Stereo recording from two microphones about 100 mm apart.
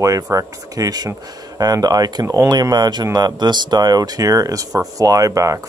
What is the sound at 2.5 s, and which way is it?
Speech, 45° right (ahead or behind).